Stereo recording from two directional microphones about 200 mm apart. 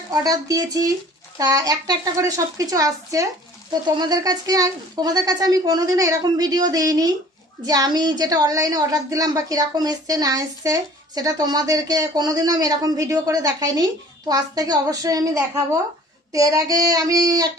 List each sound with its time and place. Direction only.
0.1 s a child's voice: 20° right (ahead or behind)